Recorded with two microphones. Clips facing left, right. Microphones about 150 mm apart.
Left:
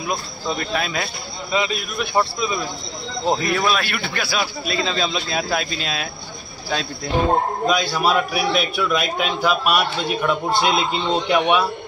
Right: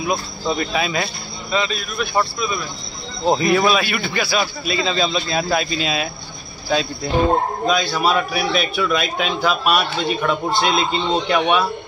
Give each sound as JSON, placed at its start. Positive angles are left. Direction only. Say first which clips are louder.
{"t": 0.1, "sound": "speech", "louder": "right 2 dB", "side_deg": -5}
{"t": 1.6, "sound": "a man's voice", "louder": "even", "side_deg": 15}
{"t": 3.3, "sound": "speech", "louder": "right 4 dB", "side_deg": -5}
{"t": 7.6, "sound": "a man's voice", "louder": "right 1 dB", "side_deg": 10}